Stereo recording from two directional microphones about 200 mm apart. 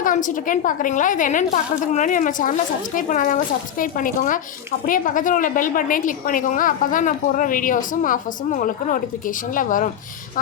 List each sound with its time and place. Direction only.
0.0 s a woman's voice: 40° left (ahead or behind)